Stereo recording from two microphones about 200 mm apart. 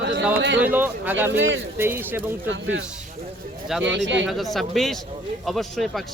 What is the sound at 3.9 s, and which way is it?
Speech, 65° right (ahead or behind).